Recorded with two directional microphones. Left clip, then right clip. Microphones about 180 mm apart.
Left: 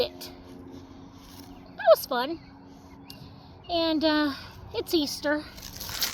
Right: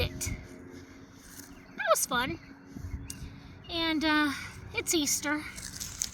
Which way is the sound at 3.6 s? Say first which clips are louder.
Left 5 dB; 45° right (ahead or behind).